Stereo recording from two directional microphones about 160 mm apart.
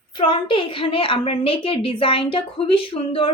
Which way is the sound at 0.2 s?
35° left (ahead or behind).